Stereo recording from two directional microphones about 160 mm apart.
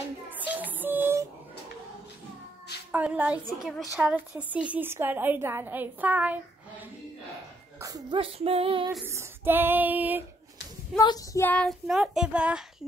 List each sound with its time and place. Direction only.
0.6 s music: 10° right (ahead or behind)
2.9 s a woman's voice: 10° right (ahead or behind)
7.8 s speech: 20° right (ahead or behind)
8.2 s female singing: 35° right (ahead or behind)
9.0 s a woman's voice: 15° right (ahead or behind)
11.0 s child singing: 25° left (ahead or behind)
11.4 s child singing: 5° left (ahead or behind)